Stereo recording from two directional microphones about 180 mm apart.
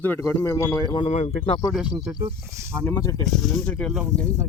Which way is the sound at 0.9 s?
35° left (ahead or behind).